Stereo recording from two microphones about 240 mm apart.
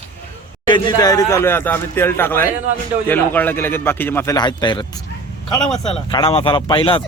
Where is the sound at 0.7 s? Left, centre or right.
Centre.